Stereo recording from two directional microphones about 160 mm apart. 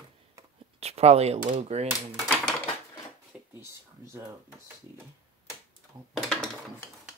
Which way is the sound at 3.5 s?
15° right (ahead or behind).